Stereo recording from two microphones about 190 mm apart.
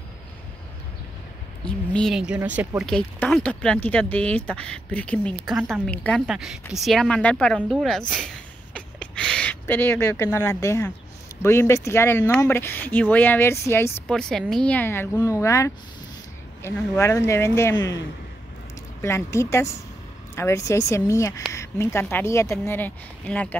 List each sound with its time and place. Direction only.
1.6 s a woman's voice: 5° left (ahead or behind)
2.9 s a woman's voice: 5° left (ahead or behind)
8.7 s a sound: 5° left (ahead or behind)
11.4 s speech: 15° left (ahead or behind)
14.0 s a woman's voice: 5° left (ahead or behind)
18.9 s speech: 15° left (ahead or behind)